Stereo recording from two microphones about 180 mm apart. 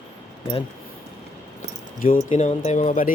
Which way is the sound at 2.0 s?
45° left (ahead or behind).